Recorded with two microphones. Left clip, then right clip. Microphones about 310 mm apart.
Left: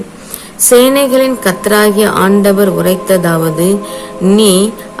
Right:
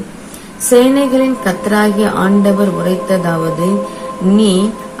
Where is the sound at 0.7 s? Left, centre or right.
Left.